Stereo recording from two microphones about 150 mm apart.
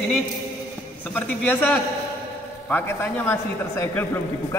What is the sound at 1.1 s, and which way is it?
Speech, 10° left (ahead or behind).